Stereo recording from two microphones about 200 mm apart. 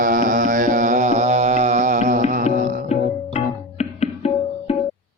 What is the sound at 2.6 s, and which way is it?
Music, 40° right (ahead or behind).